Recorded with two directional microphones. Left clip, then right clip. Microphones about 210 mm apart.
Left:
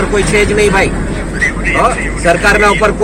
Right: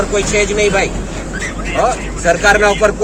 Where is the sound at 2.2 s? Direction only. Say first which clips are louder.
Left 1 dB; 20° right (ahead or behind).